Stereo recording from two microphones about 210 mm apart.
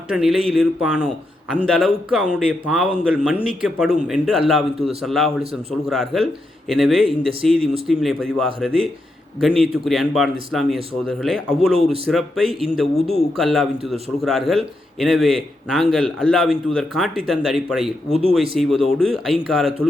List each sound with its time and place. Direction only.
0.1 s a man's voice: 5° right (ahead or behind)
18.1 s speech: 25° right (ahead or behind)
18.5 s a man's voice: centre (ahead or behind)